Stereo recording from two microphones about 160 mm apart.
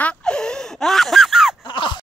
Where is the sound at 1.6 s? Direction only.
30° left (ahead or behind).